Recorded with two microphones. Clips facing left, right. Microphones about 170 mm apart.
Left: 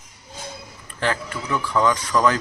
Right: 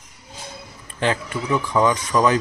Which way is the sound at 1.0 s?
20° right (ahead or behind).